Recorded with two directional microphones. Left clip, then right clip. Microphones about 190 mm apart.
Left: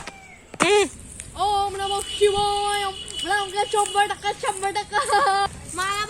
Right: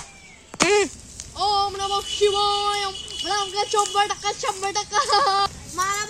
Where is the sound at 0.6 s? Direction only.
Centre (ahead or behind).